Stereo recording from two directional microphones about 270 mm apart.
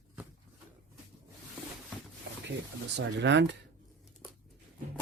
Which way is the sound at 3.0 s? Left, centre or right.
Right.